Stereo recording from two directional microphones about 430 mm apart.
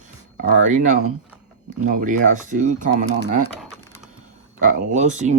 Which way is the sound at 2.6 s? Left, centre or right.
Centre.